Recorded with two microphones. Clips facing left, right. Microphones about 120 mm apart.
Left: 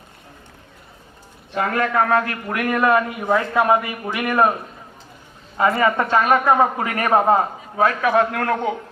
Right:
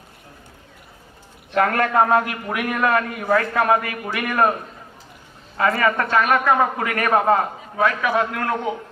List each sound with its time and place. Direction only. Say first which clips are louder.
1.5 s a man's voice: right 2 dB; 50° right (ahead or behind)
1.9 s a man's voice: right 1 dB; 25° right (ahead or behind)
2.5 s a man's voice: left 3 dB; centre (ahead or behind)
2.9 s a man's voice: left 1 dB; 15° left (ahead or behind)
5.5 s a man's voice: left 2 dB; 25° left (ahead or behind)
7.8 s a man's voice: left 3 dB; 40° left (ahead or behind)